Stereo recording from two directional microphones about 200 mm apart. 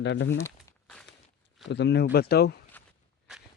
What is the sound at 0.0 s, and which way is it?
Speech, 60° left (ahead or behind).